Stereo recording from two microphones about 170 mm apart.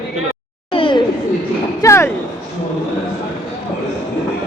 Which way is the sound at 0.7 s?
30° left (ahead or behind).